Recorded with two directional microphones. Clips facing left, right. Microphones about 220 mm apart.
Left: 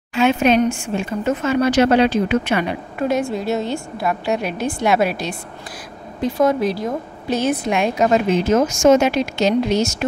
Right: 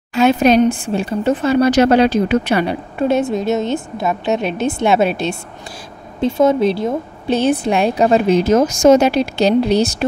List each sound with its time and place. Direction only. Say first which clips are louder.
0.1 s speech: right 3 dB; 40° right (ahead or behind)